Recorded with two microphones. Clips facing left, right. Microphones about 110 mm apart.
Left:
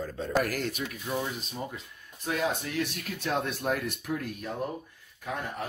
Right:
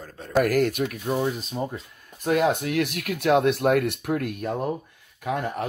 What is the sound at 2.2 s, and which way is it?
Speech, 60° right (ahead or behind).